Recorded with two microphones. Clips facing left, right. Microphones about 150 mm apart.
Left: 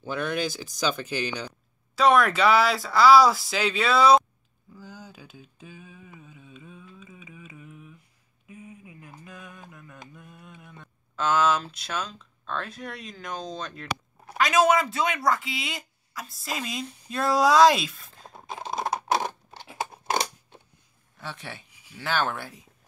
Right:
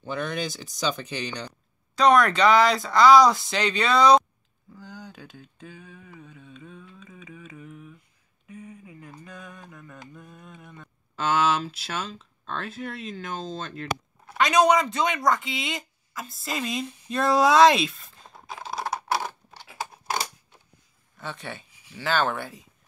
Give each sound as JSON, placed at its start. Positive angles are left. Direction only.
{"t": 0.0, "sound": "speech", "side_deg": 5}
{"t": 4.7, "sound": "a sound", "side_deg": 5}
{"t": 10.1, "sound": "mantra", "side_deg": 5}
{"t": 11.7, "sound": "speech", "side_deg": -5}
{"t": 18.3, "sound": "typing", "side_deg": 20}
{"t": 21.2, "sound": "speech", "side_deg": 0}